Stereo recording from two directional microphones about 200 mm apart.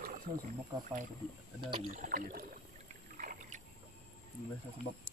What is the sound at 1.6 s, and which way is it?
Speech, 25° right (ahead or behind).